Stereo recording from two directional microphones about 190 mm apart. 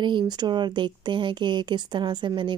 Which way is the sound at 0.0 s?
25° right (ahead or behind).